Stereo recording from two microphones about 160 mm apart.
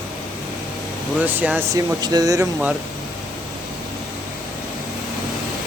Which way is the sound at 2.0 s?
25° right (ahead or behind).